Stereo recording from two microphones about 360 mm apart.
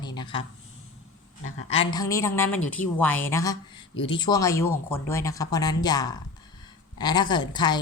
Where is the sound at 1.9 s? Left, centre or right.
Centre.